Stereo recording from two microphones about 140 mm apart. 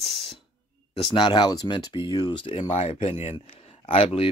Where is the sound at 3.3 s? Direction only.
40° left (ahead or behind).